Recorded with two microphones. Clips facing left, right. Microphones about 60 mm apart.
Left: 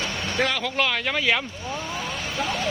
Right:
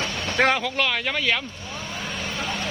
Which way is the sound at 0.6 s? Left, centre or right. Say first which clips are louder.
Even; centre.